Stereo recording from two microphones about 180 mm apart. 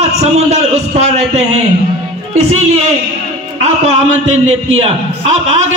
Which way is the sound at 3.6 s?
40° right (ahead or behind).